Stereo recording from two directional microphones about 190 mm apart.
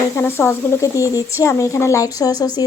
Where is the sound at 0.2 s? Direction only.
10° left (ahead or behind).